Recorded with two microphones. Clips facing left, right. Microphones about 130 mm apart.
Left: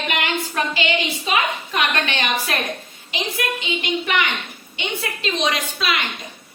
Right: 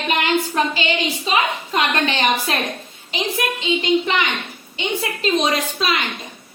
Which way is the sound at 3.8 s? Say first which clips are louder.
Right 4 dB; 25° right (ahead or behind).